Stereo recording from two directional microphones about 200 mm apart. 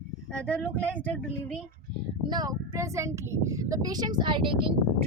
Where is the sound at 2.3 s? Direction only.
20° right (ahead or behind).